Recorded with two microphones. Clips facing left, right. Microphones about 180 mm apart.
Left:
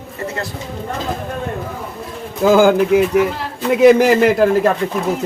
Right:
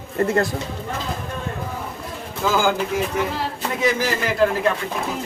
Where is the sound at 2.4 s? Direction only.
55° left (ahead or behind).